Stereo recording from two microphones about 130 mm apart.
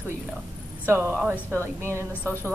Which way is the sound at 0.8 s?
15° right (ahead or behind).